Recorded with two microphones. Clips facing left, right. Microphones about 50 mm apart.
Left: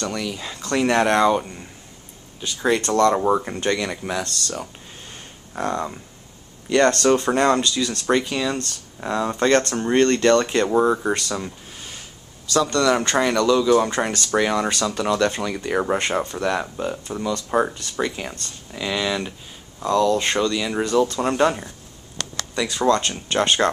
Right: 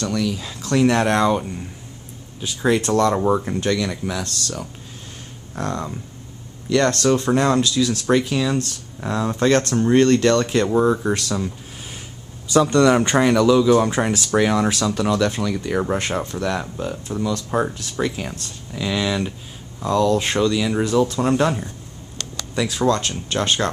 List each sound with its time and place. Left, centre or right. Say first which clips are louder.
0.0 s speech: right 4 dB; centre
4.2 s speech: even; centre
12.4 s speech: right 4 dB; centre